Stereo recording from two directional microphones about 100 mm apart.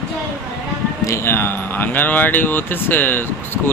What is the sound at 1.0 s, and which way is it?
Speech, 25° left (ahead or behind).